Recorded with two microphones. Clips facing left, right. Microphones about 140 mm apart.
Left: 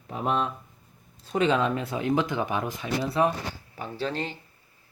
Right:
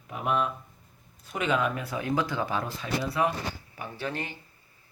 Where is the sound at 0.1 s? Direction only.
30° left (ahead or behind).